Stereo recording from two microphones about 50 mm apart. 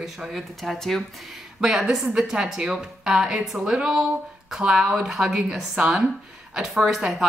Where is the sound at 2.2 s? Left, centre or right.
Centre.